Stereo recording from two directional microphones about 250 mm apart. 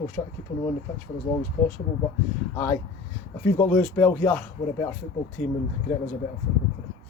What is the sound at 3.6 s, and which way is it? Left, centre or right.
Speech, centre.